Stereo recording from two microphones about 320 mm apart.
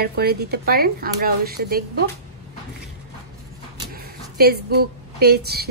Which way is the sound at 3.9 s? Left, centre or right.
Right.